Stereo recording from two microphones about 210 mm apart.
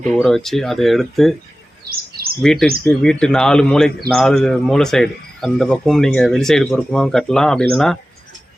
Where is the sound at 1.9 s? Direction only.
45° right (ahead or behind).